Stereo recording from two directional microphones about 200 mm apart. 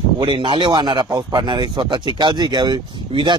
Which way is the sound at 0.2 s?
25° right (ahead or behind).